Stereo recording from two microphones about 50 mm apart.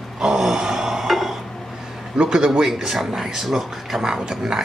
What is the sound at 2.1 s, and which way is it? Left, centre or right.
Speech, centre.